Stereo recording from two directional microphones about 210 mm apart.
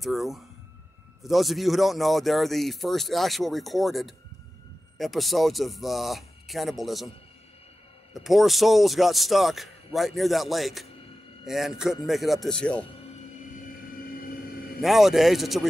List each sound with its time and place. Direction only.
0.0 s speech: centre (ahead or behind)
8.1 s speech: centre (ahead or behind)
13.5 s vehicle: 40° left (ahead or behind)
14.8 s speech: centre (ahead or behind)